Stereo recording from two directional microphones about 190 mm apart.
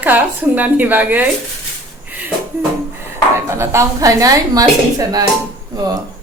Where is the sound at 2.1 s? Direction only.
10° right (ahead or behind).